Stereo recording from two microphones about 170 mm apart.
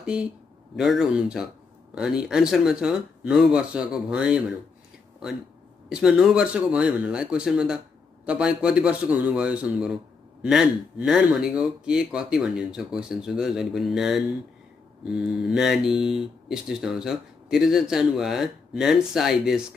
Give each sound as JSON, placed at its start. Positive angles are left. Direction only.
{"t": 0.0, "sound": "speech", "side_deg": -5}
{"t": 5.9, "sound": "a man's voice", "side_deg": -5}